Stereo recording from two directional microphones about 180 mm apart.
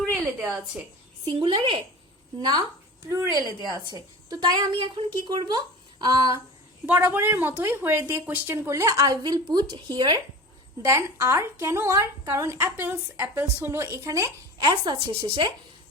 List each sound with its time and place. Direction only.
0.0 s speech: 5° right (ahead or behind)
1.2 s a woman's voice: 30° right (ahead or behind)
3.1 s a woman's voice: 15° right (ahead or behind)
6.8 s a woman's voice: 10° right (ahead or behind)